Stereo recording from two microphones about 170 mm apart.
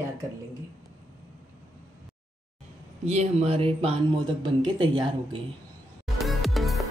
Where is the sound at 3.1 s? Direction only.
40° right (ahead or behind).